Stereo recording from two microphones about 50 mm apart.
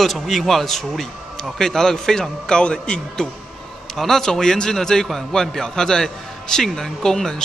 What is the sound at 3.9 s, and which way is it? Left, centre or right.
A man's voice, centre.